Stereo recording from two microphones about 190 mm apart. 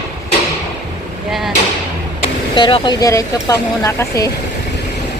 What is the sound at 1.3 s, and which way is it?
Speech, centre (ahead or behind).